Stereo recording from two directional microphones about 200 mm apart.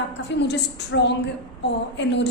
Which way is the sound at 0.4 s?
60° left (ahead or behind).